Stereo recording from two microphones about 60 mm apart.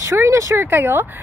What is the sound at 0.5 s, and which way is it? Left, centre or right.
Speech, right.